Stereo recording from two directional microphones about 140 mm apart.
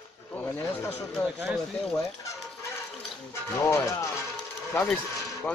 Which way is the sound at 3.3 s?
20° left (ahead or behind).